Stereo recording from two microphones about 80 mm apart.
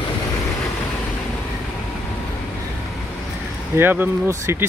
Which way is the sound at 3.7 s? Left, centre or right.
Right.